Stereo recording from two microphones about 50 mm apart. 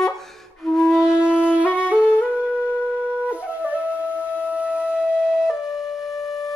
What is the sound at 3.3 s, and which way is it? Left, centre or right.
Flute, right.